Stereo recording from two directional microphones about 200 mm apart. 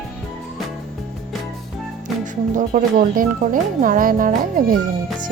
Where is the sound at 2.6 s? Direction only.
40° right (ahead or behind).